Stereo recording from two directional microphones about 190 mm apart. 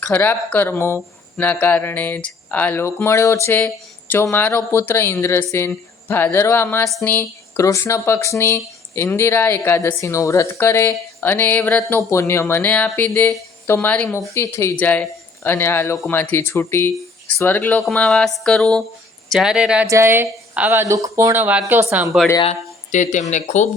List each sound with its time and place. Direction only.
0.1 s speech: 10° left (ahead or behind); by 22.1 s 10° right (ahead or behind)
22.4 s speech: 40° left (ahead or behind)